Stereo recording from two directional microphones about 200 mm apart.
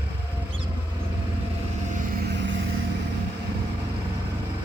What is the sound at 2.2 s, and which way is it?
Vehicle, 60° right (ahead or behind).